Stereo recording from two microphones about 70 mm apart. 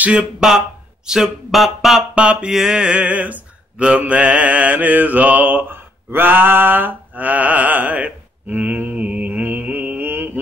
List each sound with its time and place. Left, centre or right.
0.0 s speech: centre
2.1 s mantra: centre